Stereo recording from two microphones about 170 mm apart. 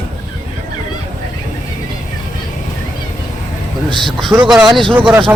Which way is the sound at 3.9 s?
25° right (ahead or behind).